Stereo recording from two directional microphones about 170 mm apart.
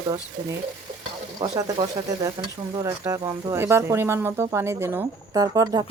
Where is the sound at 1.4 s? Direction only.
25° right (ahead or behind).